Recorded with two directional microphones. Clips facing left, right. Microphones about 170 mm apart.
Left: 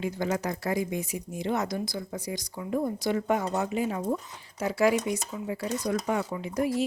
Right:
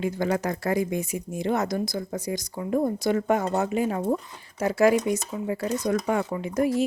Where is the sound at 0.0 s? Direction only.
55° right (ahead or behind).